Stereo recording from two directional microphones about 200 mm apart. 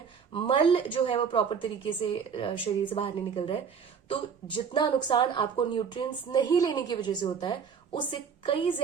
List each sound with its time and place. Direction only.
0.3 s speech: 25° left (ahead or behind)